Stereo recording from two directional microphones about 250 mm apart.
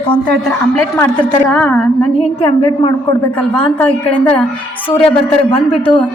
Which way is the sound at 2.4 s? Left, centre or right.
Centre.